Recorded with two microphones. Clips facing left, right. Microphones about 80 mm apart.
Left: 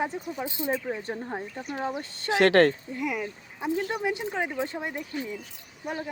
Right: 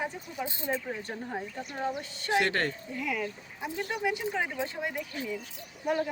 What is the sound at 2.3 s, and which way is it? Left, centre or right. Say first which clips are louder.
Speech: left 8 dB; left.